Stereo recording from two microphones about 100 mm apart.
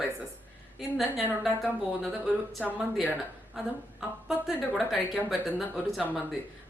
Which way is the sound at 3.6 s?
Centre (ahead or behind).